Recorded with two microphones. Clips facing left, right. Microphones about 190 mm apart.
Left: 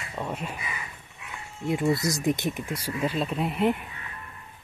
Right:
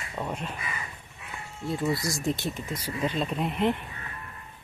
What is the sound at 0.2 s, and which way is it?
Speech, 5° left (ahead or behind).